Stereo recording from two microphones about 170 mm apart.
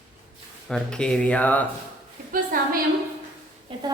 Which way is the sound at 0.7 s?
5° left (ahead or behind).